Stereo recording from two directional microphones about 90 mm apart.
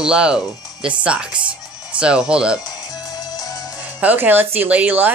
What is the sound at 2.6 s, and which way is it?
Music, 45° left (ahead or behind).